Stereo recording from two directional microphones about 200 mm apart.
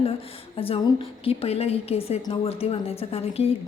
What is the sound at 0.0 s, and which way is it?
A woman's voice, 30° left (ahead or behind).